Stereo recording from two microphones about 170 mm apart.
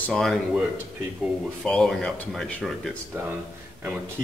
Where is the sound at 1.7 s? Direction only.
5° left (ahead or behind).